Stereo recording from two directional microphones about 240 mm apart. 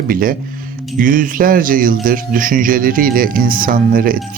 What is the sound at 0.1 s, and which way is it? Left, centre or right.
Speech, right.